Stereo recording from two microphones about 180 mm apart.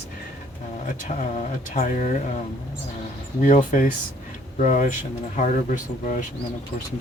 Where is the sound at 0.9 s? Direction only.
45° left (ahead or behind).